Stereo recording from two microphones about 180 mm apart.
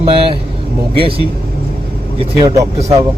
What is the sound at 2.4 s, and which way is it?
Speech, 25° right (ahead or behind).